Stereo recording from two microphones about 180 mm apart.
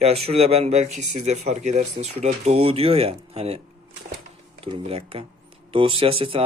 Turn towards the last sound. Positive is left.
turn(degrees=-30)  # may be behind; listen again after turning